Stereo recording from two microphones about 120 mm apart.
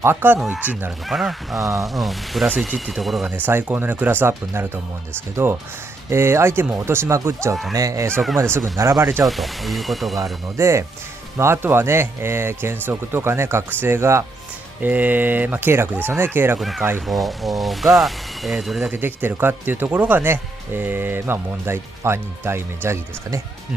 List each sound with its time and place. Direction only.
0.0 s speech: 20° right (ahead or behind)
1.0 s speech: centre (ahead or behind)
1.6 s speech: 25° right (ahead or behind)
2.0 s speech: centre (ahead or behind)
3.3 s speech: 15° right (ahead or behind)
8.1 s speech: centre (ahead or behind)
8.4 s speech: 20° right (ahead or behind)
9.2 s speech: centre (ahead or behind)
10.6 s speech: 25° right (ahead or behind)
16.5 s speech: centre (ahead or behind)
18.9 s speech: 15° right (ahead or behind)